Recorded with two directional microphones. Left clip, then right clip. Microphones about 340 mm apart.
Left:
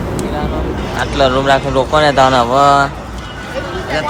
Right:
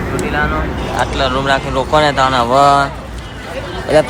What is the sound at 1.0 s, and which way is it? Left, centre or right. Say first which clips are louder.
Speech: left 3 dB; centre.